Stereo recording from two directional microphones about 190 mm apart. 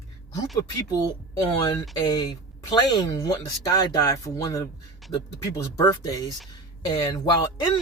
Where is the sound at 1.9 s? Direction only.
20° left (ahead or behind).